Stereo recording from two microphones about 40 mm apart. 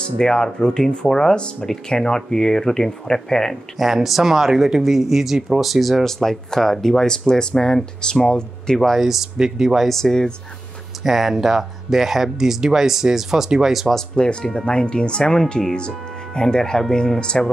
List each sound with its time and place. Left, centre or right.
0.2 s speech: centre
3.7 s speech: centre
8.9 s speech: centre
9.8 s speech: centre
11.1 s speech: centre
14.1 s speech: left